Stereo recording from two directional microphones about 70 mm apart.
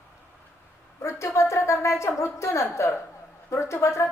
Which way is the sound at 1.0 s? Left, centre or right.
Left.